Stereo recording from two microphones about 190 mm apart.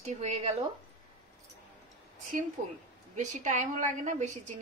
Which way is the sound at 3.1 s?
40° right (ahead or behind).